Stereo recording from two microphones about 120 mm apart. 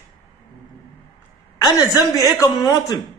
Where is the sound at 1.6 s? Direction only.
30° left (ahead or behind).